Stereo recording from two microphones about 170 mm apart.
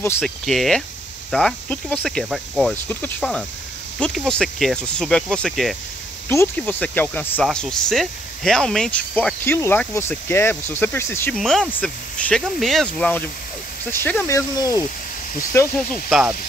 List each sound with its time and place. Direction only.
0.2 s speech: centre (ahead or behind)
6.2 s speech: 15° left (ahead or behind)
11.3 s speech: centre (ahead or behind)
15.9 s speech: 5° right (ahead or behind)